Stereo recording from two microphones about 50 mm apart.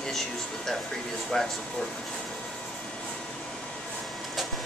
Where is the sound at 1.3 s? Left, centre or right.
Centre.